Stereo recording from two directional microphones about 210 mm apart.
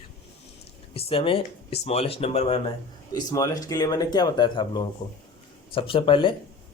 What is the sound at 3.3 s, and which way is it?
Speech, 15° left (ahead or behind).